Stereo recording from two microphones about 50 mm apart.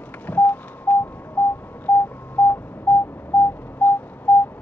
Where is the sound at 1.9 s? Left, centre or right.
Left.